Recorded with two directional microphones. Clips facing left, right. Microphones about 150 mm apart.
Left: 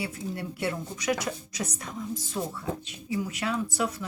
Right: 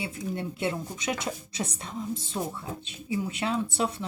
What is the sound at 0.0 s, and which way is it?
Speech, 25° right (ahead or behind).